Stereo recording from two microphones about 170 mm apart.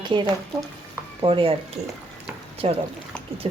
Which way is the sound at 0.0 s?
25° right (ahead or behind).